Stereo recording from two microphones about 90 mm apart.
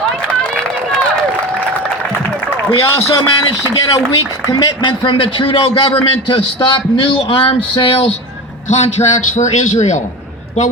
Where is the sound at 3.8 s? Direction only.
45° left (ahead or behind).